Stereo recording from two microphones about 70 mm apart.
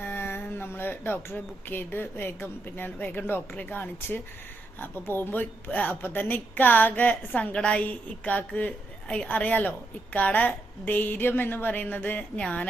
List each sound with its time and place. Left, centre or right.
0.0 s a woman's voice: left